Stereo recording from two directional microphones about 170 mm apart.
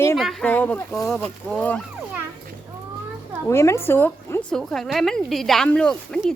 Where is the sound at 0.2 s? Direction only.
Centre (ahead or behind).